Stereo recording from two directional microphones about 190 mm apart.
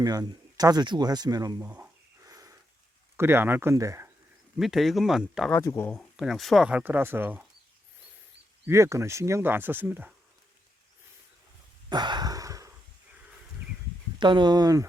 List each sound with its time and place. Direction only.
0.0 s speech: 20° right (ahead or behind)
4.5 s speech: centre (ahead or behind)
5.5 s speech: 10° left (ahead or behind); by 7.4 s 10° right (ahead or behind)
8.6 s speech: 15° right (ahead or behind)
11.9 s a sound: 25° right (ahead or behind)
14.2 s speech: 25° right (ahead or behind)